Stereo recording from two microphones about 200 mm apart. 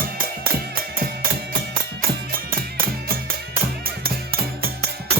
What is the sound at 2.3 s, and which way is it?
Music, 45° right (ahead or behind).